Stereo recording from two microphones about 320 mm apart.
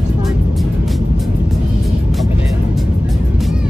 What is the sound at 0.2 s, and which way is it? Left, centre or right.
Music, centre.